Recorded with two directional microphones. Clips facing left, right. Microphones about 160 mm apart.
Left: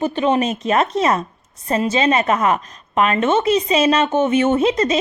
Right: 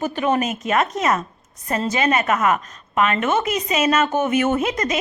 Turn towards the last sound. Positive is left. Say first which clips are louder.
# left 5 dB
turn(degrees=30)  # may be behind; listen again after turning